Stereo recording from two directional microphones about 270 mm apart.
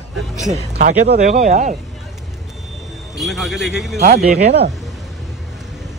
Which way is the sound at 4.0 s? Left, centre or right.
Right.